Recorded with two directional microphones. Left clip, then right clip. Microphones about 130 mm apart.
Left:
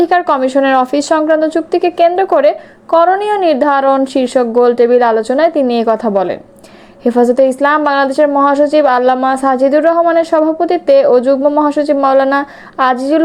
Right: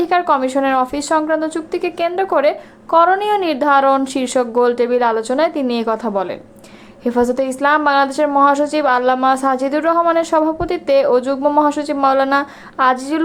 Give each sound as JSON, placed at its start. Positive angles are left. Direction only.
{"t": 0.0, "sound": "a woman's voice", "side_deg": 30}